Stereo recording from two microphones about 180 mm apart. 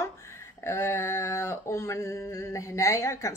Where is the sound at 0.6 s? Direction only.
15° left (ahead or behind).